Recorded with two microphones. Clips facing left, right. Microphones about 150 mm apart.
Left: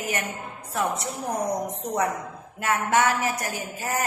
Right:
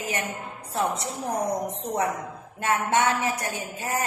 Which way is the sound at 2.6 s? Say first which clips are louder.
Left 1 dB; 25° right (ahead or behind).